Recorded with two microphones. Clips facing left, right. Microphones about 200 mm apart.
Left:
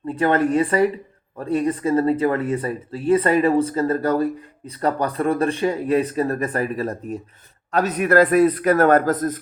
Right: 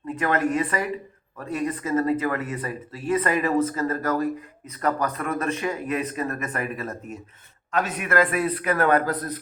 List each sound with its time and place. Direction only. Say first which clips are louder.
0.1 s speech: left 5 dB; 30° left (ahead or behind)